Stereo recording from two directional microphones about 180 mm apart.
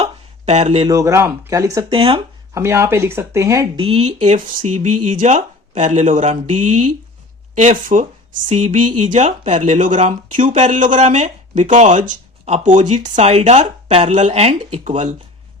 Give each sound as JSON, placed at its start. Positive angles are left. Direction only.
{"t": 0.0, "sound": "a sound", "side_deg": -35}
{"t": 0.9, "sound": "speech", "side_deg": -15}
{"t": 1.9, "sound": "speech", "side_deg": -30}
{"t": 2.6, "sound": "speech", "side_deg": -15}
{"t": 3.8, "sound": "speech", "side_deg": -35}